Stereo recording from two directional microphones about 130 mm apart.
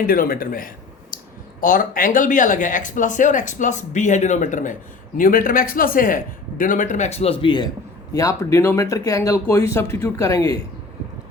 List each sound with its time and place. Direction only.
0.1 s speech: 90° left; by 7.7 s 35° left (ahead or behind)
8.1 s speech: 25° left (ahead or behind)